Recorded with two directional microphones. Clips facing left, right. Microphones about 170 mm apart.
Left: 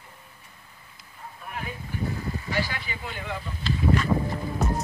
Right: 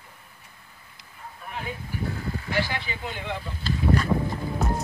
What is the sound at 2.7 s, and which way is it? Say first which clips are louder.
Speech: right 3 dB; 20° right (ahead or behind).